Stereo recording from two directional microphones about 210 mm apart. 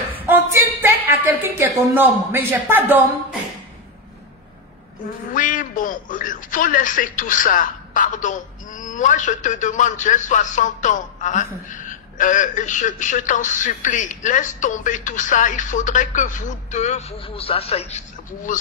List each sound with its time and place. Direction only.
0.1 s a sound: 10° right (ahead or behind)
2.0 s speech: 10° right (ahead or behind)
5.3 s a woman's voice: 40° left (ahead or behind)